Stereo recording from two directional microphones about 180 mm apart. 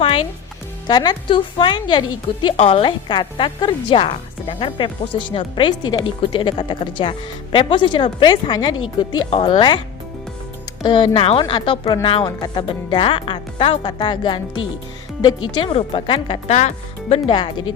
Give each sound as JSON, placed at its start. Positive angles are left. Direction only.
{"t": 0.0, "sound": "music", "side_deg": 30}
{"t": 0.9, "sound": "a woman's voice", "side_deg": 25}
{"t": 10.8, "sound": "a woman's voice", "side_deg": 25}
{"t": 16.6, "sound": "speech", "side_deg": 40}
{"t": 17.2, "sound": "a woman's voice", "side_deg": 25}